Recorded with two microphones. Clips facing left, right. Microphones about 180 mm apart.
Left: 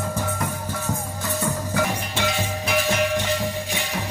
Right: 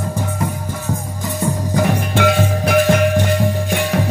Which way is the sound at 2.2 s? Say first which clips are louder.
Right 10 dB; 55° right (ahead or behind).